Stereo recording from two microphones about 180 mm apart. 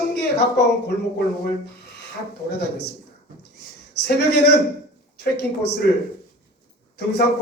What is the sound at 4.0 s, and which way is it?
Speech, 65° left (ahead or behind).